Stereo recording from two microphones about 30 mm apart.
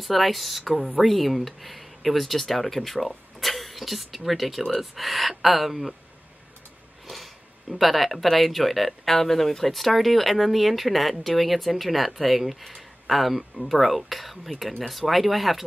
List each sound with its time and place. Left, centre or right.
0.0 s speech: centre
7.7 s speech: centre